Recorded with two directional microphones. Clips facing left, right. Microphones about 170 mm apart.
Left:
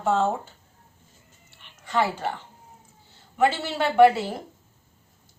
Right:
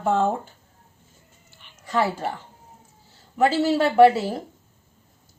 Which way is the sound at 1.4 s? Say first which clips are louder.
Right 1 dB; centre (ahead or behind).